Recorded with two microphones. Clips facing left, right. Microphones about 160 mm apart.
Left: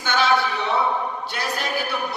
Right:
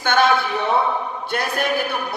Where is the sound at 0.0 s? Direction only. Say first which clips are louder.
Right 5 dB; 55° right (ahead or behind).